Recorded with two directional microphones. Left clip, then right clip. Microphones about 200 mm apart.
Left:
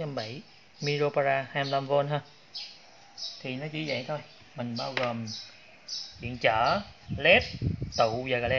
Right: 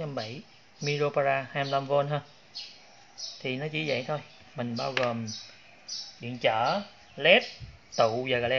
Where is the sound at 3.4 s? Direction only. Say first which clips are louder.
Right 5 dB; 20° right (ahead or behind).